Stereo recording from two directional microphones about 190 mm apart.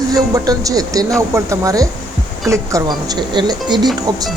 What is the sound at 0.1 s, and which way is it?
Speech, 20° right (ahead or behind).